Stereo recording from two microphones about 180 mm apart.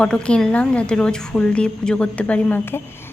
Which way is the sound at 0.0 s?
5° left (ahead or behind).